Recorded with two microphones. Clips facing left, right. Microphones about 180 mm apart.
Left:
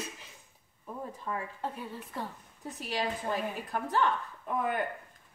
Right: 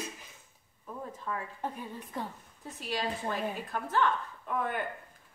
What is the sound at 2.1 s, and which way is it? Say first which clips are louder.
Speech: right 1 dB; 15° right (ahead or behind).